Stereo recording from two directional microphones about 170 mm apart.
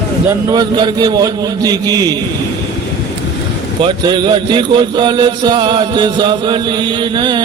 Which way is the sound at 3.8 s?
25° right (ahead or behind).